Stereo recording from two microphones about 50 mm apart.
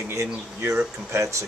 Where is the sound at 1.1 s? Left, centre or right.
Right.